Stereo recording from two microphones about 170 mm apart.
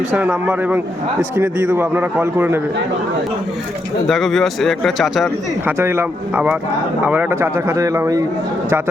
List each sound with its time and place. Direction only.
0.2 s speech: 5° right (ahead or behind)
4.1 s a man's voice: centre (ahead or behind)
5.6 s speech: 15° right (ahead or behind)